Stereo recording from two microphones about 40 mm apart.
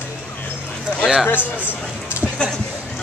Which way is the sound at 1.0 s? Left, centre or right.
Centre.